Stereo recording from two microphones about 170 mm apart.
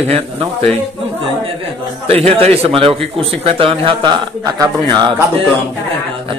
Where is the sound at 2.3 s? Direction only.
35° right (ahead or behind).